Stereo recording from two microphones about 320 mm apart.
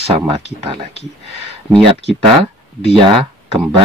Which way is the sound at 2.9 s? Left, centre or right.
Centre.